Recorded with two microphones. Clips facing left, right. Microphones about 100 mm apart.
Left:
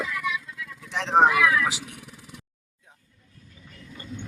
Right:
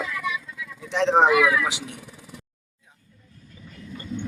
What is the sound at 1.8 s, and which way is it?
Vehicle, centre (ahead or behind).